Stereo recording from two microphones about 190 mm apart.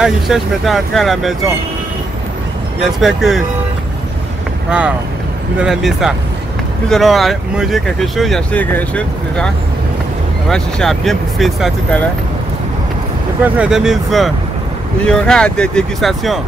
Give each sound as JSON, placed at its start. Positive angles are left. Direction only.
{"t": 0.0, "sound": "speech", "side_deg": 0}
{"t": 3.0, "sound": "speech", "side_deg": 0}
{"t": 4.6, "sound": "speech", "side_deg": -5}
{"t": 10.5, "sound": "speech", "side_deg": 0}
{"t": 13.4, "sound": "speech", "side_deg": -5}